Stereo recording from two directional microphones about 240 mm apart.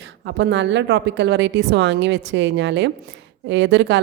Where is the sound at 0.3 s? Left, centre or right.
Right.